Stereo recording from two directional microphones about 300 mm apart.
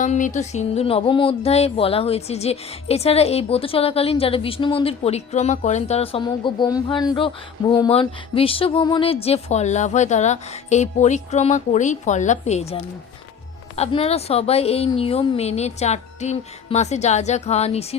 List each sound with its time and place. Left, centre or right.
0.0 s speech: left